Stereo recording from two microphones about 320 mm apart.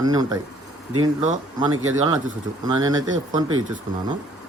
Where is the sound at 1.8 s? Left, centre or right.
Right.